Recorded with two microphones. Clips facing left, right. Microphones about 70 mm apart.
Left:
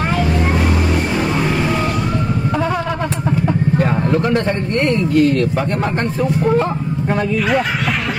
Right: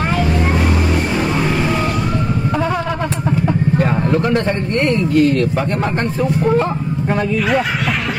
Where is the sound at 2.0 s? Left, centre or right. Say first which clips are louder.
Even; right.